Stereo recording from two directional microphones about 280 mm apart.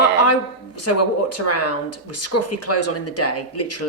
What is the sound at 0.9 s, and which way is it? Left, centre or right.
Speech, left.